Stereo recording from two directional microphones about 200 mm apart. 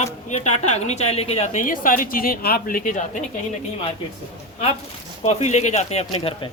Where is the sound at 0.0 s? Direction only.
35° left (ahead or behind).